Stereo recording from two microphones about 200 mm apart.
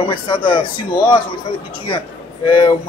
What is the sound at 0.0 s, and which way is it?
Speech, 25° left (ahead or behind).